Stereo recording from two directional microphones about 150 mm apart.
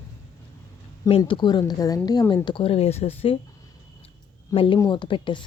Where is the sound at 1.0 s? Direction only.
30° left (ahead or behind).